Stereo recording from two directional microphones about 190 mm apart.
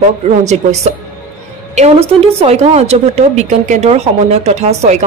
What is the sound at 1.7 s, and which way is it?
A woman's voice, 35° right (ahead or behind).